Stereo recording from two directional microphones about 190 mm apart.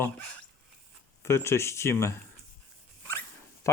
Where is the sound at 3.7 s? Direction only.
15° left (ahead or behind).